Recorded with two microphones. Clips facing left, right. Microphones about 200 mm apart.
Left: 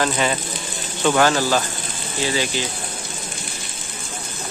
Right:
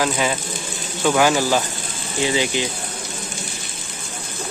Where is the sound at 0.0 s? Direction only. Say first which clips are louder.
Even; 5° right (ahead or behind).